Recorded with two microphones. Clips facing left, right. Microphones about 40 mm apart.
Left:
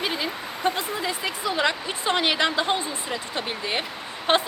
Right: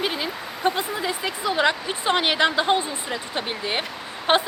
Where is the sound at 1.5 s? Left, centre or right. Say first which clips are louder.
Right 4 dB; right.